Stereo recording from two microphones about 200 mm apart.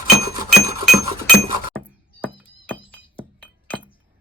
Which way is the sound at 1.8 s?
10° left (ahead or behind).